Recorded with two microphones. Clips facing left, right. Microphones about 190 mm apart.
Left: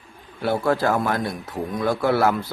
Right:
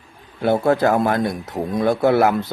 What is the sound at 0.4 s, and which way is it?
Mantra, 20° right (ahead or behind).